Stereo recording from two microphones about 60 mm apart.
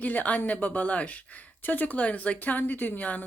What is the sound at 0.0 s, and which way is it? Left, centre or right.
A woman's voice, left.